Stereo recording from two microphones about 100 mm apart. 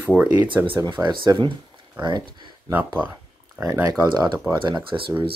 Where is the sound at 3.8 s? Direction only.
45° right (ahead or behind).